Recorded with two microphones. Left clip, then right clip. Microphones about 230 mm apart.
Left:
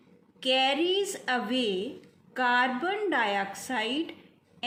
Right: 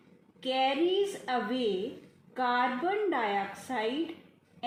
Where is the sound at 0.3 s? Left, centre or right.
Left.